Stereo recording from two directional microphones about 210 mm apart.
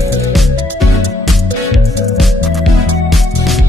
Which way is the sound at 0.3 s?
Centre (ahead or behind).